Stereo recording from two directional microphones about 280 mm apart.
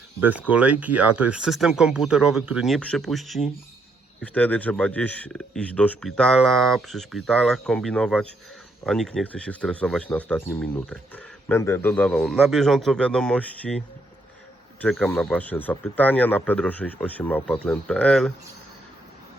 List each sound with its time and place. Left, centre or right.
0.2 s speech: centre